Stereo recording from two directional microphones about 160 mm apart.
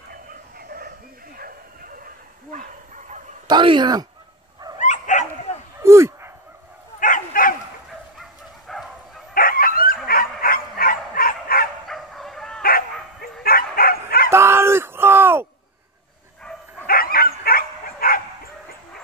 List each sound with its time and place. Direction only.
0.1 s bow-wow: 70° right (ahead or behind)
3.4 s speech: 30° right (ahead or behind)
4.7 s dog: 50° left (ahead or behind)
5.8 s dog: 15° right (ahead or behind)
7.0 s dog: 55° left (ahead or behind)
8.2 s dog: centre (ahead or behind)
9.3 s dog: 65° left (ahead or behind)
10.0 s bow-wow: 65° left (ahead or behind)
11.9 s fowl: centre (ahead or behind)
12.6 s bow-wow: 65° left (ahead or behind)
14.3 s a sound: 15° right (ahead or behind)
16.8 s bow-wow: 65° left (ahead or behind)